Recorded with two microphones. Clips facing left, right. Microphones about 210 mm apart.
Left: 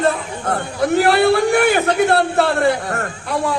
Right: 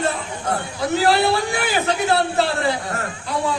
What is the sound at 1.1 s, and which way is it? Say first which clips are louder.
A man's voice: left 5 dB; 55° left (ahead or behind).